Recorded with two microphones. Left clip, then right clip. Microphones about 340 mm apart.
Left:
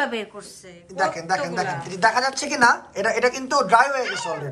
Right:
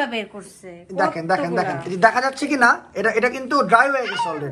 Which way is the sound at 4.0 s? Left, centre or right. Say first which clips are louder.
Right 3 dB; centre.